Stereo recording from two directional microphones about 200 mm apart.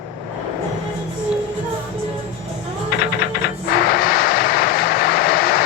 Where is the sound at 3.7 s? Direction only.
50° left (ahead or behind).